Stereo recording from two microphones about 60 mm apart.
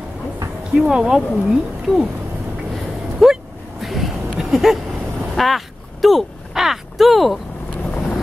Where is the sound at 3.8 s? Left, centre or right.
Centre.